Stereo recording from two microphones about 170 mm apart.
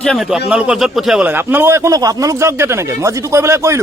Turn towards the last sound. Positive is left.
turn(degrees=-15)  # may be behind; listen again after turning